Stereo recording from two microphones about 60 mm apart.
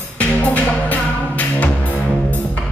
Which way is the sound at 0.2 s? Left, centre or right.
Left.